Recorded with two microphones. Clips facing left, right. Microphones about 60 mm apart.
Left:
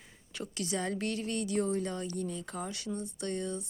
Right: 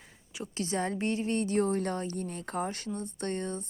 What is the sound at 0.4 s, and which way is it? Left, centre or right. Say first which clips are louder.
Speech: right 3 dB; right.